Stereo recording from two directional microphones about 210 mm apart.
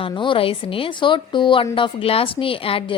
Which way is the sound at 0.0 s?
25° left (ahead or behind).